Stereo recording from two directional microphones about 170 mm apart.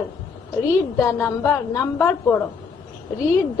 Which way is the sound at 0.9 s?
15° left (ahead or behind).